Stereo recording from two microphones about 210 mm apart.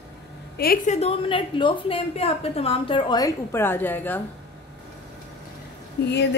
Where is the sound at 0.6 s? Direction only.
45° left (ahead or behind).